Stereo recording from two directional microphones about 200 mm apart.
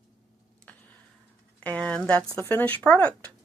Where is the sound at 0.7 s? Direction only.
5° left (ahead or behind).